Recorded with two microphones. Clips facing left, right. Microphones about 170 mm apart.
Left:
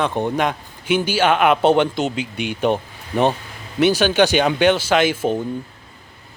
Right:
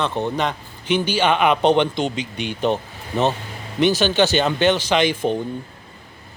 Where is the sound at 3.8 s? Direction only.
10° left (ahead or behind).